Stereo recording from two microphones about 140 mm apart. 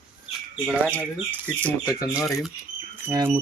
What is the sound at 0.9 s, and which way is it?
Speech, 10° left (ahead or behind).